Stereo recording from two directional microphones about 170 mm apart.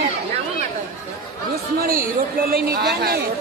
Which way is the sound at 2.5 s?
70° right (ahead or behind).